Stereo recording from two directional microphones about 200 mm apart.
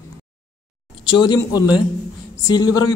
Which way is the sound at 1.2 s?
20° left (ahead or behind).